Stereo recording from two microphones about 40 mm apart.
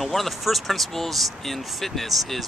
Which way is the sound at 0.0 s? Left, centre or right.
Centre.